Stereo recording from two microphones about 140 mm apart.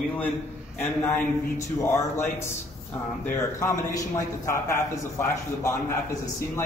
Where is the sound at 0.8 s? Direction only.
15° left (ahead or behind).